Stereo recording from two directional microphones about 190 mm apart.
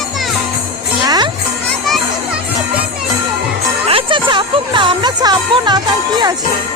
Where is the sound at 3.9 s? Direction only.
25° right (ahead or behind).